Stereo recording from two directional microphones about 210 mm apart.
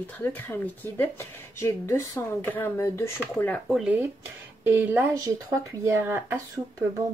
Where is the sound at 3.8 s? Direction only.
10° right (ahead or behind).